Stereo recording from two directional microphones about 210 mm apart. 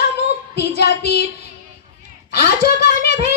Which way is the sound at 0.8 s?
50° left (ahead or behind).